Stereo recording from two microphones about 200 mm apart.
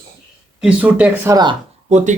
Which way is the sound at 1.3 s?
20° right (ahead or behind).